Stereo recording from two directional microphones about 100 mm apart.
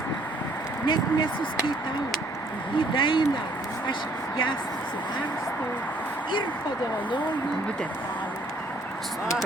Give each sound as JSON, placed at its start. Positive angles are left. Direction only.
{"t": 0.9, "sound": "speech", "side_deg": 55}
{"t": 2.7, "sound": "speech", "side_deg": 55}